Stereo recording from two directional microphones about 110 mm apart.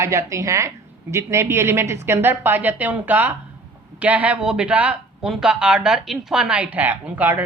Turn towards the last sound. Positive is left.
turn(degrees=-15)  # may be behind; listen again after turning